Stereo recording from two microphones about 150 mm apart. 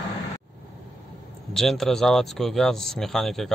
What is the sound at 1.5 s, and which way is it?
Speech, centre (ahead or behind).